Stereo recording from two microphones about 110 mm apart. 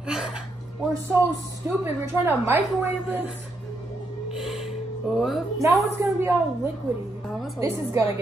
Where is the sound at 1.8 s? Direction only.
20° right (ahead or behind).